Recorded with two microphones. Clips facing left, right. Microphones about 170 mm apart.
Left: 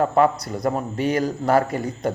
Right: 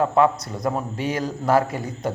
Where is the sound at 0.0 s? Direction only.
Centre (ahead or behind).